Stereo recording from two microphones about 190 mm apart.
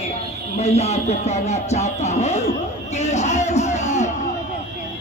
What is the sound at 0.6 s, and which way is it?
Speech, 35° left (ahead or behind).